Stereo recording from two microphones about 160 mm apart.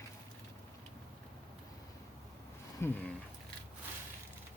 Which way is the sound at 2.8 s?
15° left (ahead or behind).